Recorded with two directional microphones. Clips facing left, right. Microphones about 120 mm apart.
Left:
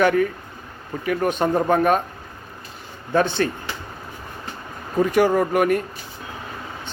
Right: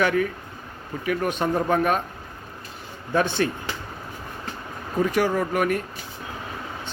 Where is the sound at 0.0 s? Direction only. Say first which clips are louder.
Left 4 dB; centre (ahead or behind).